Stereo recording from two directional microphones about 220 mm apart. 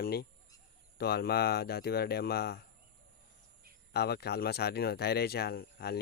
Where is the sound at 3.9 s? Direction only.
45° left (ahead or behind).